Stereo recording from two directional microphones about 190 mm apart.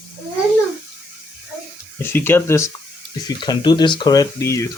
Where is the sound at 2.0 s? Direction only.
10° left (ahead or behind).